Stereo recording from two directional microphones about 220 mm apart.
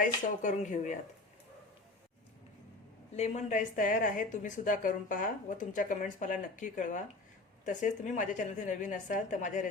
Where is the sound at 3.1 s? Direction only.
30° left (ahead or behind).